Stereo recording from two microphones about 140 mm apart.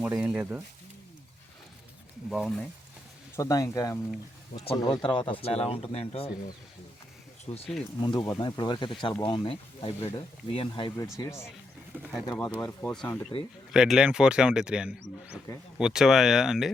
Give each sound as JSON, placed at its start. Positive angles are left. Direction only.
{"t": 0.0, "sound": "speech", "side_deg": -10}
{"t": 2.3, "sound": "speech", "side_deg": 0}
{"t": 3.3, "sound": "speech", "side_deg": 25}
{"t": 4.5, "sound": "speech", "side_deg": 45}
{"t": 4.8, "sound": "speech", "side_deg": 30}
{"t": 7.5, "sound": "speech", "side_deg": 35}
{"t": 10.9, "sound": "speech", "side_deg": 20}
{"t": 11.9, "sound": "speech", "side_deg": -15}
{"t": 12.5, "sound": "speech", "side_deg": 10}
{"t": 13.7, "sound": "speech", "side_deg": -5}
{"t": 15.5, "sound": "speech", "side_deg": 25}
{"t": 15.8, "sound": "speech", "side_deg": -5}